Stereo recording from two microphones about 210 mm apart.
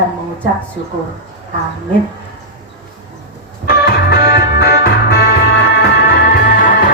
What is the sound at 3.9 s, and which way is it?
Music, 45° left (ahead or behind).